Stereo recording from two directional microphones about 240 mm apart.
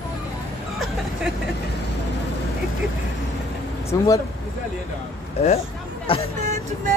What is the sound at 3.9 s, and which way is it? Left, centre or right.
Speech, centre.